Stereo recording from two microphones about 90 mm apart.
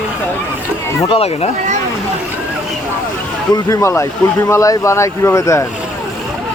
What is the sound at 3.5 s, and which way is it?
Speech, 35° left (ahead or behind).